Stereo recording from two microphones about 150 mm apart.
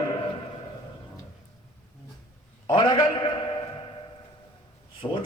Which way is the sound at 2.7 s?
30° left (ahead or behind).